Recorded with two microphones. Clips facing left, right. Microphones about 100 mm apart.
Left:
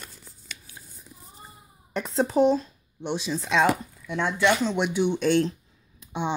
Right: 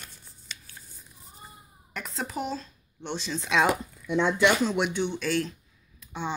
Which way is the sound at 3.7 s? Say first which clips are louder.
Right 3 dB; 15° right (ahead or behind).